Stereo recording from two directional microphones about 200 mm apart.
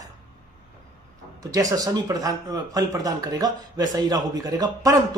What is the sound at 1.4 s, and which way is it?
Speech, 15° right (ahead or behind).